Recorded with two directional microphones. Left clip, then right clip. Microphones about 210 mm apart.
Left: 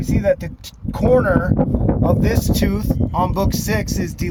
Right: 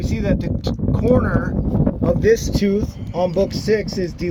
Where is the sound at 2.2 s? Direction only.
45° left (ahead or behind).